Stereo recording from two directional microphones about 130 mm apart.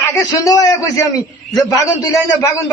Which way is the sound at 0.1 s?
25° left (ahead or behind).